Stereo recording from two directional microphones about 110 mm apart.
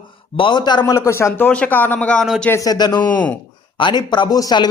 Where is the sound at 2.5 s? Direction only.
35° left (ahead or behind).